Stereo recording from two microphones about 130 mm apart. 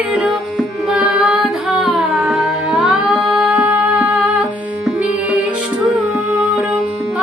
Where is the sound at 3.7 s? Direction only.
15° right (ahead or behind).